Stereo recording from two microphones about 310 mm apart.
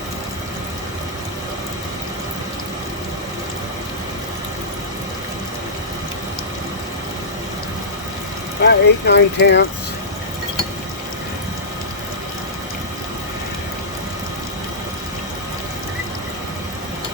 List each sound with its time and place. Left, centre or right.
8.6 s speech: left